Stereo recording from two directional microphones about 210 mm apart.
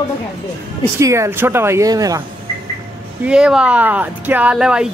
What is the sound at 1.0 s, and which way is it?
Speech, 15° right (ahead or behind).